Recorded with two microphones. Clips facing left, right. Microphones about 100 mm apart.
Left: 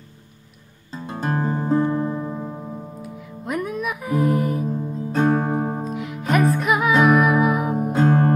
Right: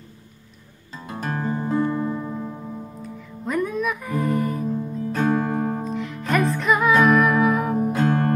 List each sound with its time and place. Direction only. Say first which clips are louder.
1.0 s music: left 3 dB; 30° left (ahead or behind); by 4.6 s 10° left (ahead or behind)
5.1 s music: left 2 dB; 30° left (ahead or behind)
5.9 s music: left 1 dB; 10° left (ahead or behind)
7.9 s music: left 6 dB; 25° left (ahead or behind)